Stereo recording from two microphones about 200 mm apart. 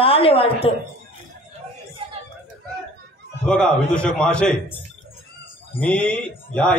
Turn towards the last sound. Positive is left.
turn(degrees=5)  # may be behind; listen again after turning